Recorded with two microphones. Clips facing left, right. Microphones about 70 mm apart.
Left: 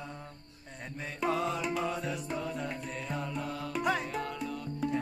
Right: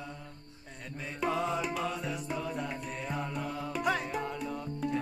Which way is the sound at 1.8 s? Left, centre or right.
Centre.